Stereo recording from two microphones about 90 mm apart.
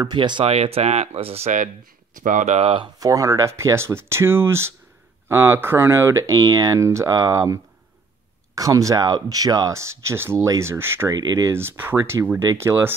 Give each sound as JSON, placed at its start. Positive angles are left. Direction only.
{"t": 0.0, "sound": "speech", "side_deg": -60}
{"t": 2.6, "sound": "speech", "side_deg": -70}
{"t": 3.0, "sound": "speech", "side_deg": -40}
{"t": 11.1, "sound": "speech", "side_deg": -40}